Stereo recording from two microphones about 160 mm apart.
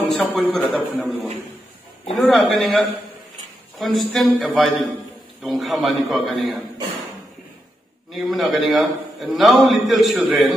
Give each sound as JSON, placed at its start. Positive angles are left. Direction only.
{"t": 0.2, "sound": "a man's voice", "side_deg": 0}
{"t": 2.1, "sound": "a man's voice", "side_deg": 0}
{"t": 3.8, "sound": "a man's voice", "side_deg": 0}
{"t": 8.1, "sound": "a man's voice", "side_deg": 0}